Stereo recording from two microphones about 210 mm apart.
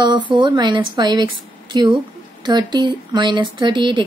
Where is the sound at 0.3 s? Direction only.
20° right (ahead or behind).